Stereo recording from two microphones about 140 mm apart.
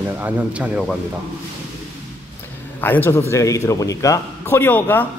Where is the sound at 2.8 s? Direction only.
15° left (ahead or behind).